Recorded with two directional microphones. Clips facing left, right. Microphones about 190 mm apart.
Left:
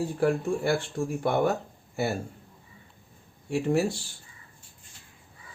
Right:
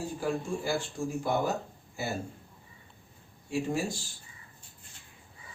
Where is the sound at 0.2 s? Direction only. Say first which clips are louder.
Left 7 dB; 65° left (ahead or behind).